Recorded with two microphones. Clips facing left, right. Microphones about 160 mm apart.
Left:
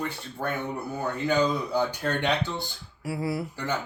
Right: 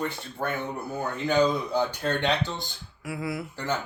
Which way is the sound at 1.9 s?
10° left (ahead or behind).